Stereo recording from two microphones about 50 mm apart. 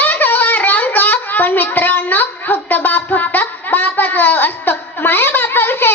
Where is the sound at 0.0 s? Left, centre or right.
Left.